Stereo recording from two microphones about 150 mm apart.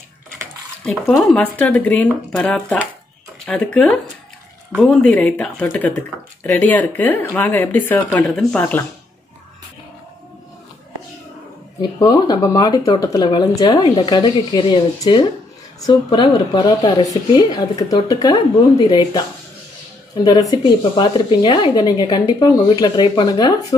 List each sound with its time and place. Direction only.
0.8 s speech: centre (ahead or behind)
11.8 s speech: 30° left (ahead or behind)
20.2 s speech: 25° left (ahead or behind)